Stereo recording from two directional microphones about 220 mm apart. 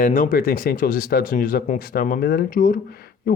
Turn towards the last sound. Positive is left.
turn(degrees=45)  # may be behind; listen again after turning